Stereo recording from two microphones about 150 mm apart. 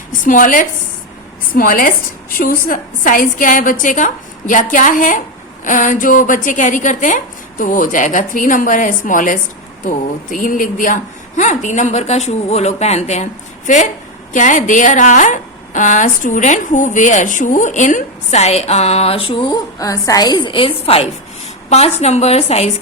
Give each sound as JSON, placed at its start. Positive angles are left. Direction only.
{"t": 0.1, "sound": "a woman's voice", "side_deg": 60}
{"t": 19.5, "sound": "a woman's voice", "side_deg": 20}